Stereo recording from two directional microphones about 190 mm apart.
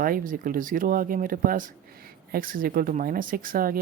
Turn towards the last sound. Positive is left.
turn(degrees=-50)  # may be behind; listen again after turning